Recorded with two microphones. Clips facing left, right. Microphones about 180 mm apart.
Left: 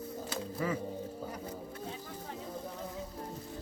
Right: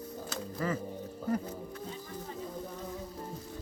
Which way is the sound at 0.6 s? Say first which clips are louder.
Right 1 dB; 5° left (ahead or behind).